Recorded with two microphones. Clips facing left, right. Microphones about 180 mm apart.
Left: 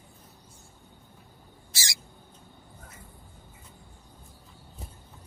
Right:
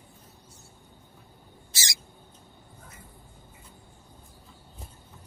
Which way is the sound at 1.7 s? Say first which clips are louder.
Even; 20° right (ahead or behind).